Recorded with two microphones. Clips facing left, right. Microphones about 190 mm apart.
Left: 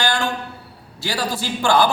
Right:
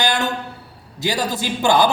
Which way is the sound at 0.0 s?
20° right (ahead or behind).